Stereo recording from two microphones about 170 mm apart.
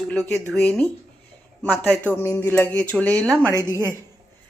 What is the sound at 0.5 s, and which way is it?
Speech, 5° left (ahead or behind).